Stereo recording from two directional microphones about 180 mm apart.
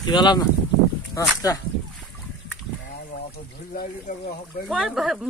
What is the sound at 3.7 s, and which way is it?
Speech, 55° left (ahead or behind).